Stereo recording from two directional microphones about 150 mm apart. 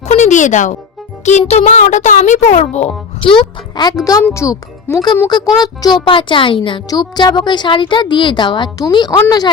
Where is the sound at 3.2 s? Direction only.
35° left (ahead or behind).